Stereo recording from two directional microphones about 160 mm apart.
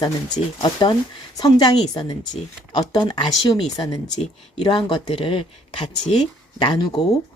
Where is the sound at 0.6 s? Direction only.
30° left (ahead or behind).